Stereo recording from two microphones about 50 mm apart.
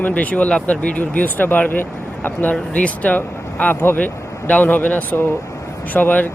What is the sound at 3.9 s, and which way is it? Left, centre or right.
Speech, left.